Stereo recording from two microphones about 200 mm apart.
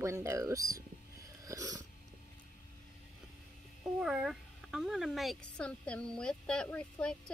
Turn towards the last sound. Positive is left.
turn(degrees=5)  # may be behind; listen again after turning